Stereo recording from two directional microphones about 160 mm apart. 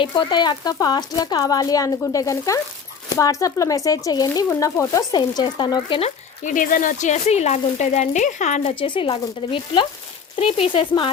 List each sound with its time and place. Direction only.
0.0 s speech: 30° left (ahead or behind)
6.4 s speech: 55° left (ahead or behind)
8.8 s speech: 35° left (ahead or behind)